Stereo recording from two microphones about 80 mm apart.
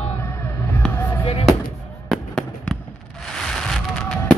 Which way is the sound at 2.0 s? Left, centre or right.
Centre.